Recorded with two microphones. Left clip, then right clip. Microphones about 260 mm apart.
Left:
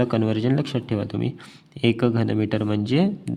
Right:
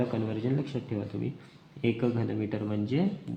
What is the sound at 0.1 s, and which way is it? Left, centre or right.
A man's voice, left.